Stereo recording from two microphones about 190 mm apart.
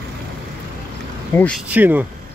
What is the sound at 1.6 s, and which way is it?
Speech, 10° right (ahead or behind).